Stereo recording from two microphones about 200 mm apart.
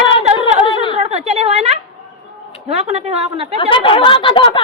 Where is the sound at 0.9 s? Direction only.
30° right (ahead or behind).